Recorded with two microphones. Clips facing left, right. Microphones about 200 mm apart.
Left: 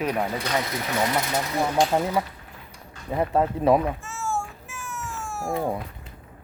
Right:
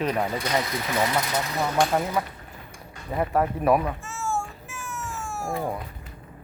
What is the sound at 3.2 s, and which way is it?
Speech, 20° left (ahead or behind).